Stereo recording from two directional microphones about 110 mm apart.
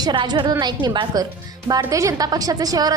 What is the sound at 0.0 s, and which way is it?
A woman's voice, 40° right (ahead or behind).